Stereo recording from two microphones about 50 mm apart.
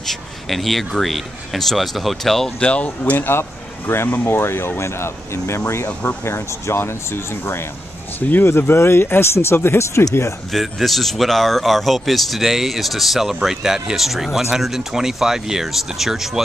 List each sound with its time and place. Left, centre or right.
0.0 s speech: centre
2.6 s speech: left
3.2 s speech: left
8.3 s speech: left
10.5 s speech: centre